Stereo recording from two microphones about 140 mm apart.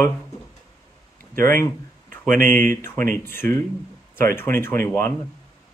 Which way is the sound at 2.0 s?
75° right (ahead or behind).